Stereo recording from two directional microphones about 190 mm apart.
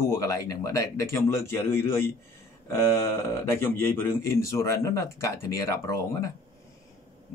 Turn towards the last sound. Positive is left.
turn(degrees=15)  # may be behind; listen again after turning